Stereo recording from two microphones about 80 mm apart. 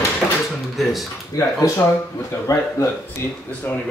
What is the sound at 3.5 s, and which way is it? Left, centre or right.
Speech, centre.